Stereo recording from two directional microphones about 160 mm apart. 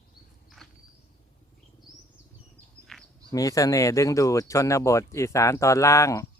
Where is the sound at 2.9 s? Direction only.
5° left (ahead or behind).